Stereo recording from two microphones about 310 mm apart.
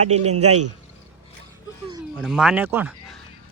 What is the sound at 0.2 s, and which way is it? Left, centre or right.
Speech, right.